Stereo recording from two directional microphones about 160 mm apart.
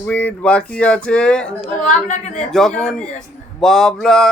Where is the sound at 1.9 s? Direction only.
50° left (ahead or behind).